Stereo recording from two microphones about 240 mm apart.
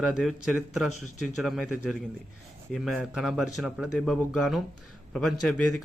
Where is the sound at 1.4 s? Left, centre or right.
Centre.